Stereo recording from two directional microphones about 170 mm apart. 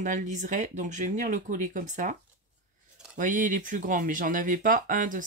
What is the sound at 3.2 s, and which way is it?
Speech, 50° right (ahead or behind).